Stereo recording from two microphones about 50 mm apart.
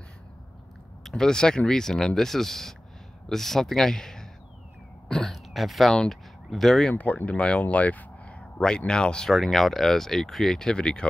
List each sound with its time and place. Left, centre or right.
1.0 s speech: centre
5.0 s throat clearing: centre
5.3 s a sound: centre
6.0 s speech: centre
6.9 s speech: left
9.3 s speech: centre